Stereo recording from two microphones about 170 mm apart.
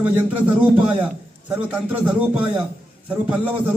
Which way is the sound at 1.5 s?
10° right (ahead or behind).